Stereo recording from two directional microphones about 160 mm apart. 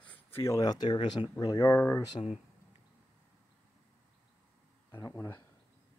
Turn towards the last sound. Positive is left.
turn(degrees=15)  # may be behind; listen again after turning